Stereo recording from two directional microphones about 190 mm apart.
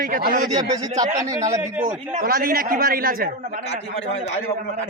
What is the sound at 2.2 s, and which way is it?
Speech, 50° right (ahead or behind).